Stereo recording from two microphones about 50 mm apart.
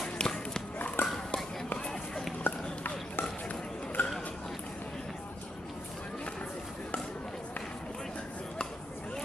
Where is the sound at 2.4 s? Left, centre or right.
Left.